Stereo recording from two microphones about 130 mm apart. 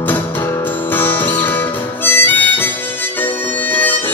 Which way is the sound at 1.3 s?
15° left (ahead or behind).